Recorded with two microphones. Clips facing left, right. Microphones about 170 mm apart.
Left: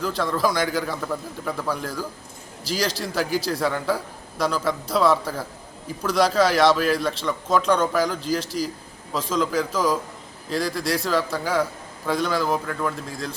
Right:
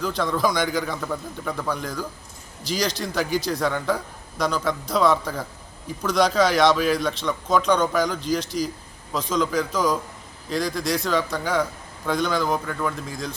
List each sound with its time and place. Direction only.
0.0 s a man's voice: centre (ahead or behind)